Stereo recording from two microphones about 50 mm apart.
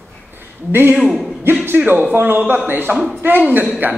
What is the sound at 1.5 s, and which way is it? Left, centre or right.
A man's voice, right.